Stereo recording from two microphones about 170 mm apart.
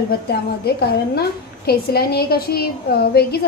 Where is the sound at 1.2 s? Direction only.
65° left (ahead or behind).